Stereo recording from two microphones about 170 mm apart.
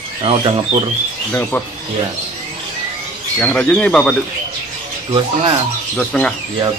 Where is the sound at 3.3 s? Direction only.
5° left (ahead or behind).